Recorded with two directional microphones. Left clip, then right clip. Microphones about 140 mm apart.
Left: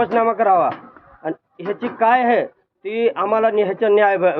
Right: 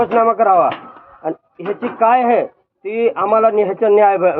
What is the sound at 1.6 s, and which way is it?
Speech, 25° left (ahead or behind).